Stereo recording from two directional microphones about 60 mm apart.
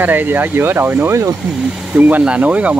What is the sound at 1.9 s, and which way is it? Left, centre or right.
Speech, right.